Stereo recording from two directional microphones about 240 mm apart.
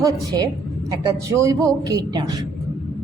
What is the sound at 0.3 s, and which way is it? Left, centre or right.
Speech, centre.